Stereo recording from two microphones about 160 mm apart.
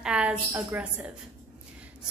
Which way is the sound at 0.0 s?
5° right (ahead or behind).